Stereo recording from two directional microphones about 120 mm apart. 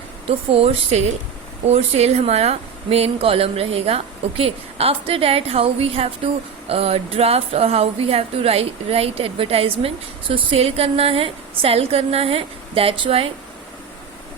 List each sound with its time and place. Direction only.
0.3 s speech: 55° right (ahead or behind)